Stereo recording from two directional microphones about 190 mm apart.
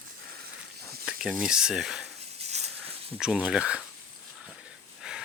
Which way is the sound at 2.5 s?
35° right (ahead or behind).